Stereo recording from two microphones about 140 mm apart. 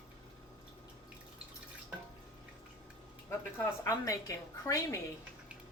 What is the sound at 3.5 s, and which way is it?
A woman's voice, 20° left (ahead or behind).